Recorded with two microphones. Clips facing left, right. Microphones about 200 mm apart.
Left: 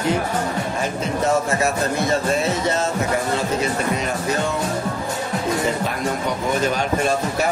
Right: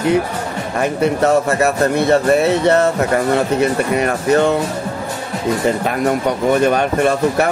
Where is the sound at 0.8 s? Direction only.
65° right (ahead or behind).